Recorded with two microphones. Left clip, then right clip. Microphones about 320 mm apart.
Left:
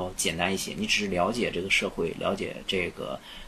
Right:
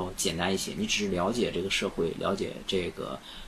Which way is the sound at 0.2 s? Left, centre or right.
Centre.